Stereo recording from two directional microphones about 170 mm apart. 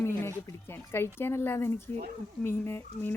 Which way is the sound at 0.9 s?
15° left (ahead or behind).